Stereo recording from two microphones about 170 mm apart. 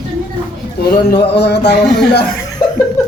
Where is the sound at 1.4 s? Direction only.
80° left.